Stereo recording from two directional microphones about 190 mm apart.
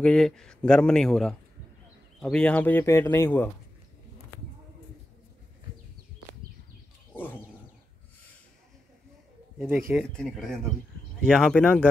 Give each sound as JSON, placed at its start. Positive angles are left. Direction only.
{"t": 0.0, "sound": "a man's voice", "side_deg": 5}
{"t": 7.2, "sound": "a sound", "side_deg": 10}
{"t": 9.6, "sound": "a man's voice", "side_deg": 0}